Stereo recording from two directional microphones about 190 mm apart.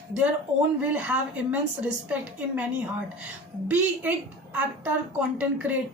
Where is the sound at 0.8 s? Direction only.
10° right (ahead or behind).